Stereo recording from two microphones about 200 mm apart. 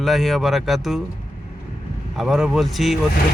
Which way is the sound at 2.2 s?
Centre (ahead or behind).